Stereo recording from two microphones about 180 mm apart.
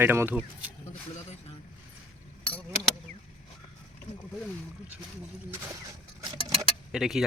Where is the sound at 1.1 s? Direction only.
35° left (ahead or behind).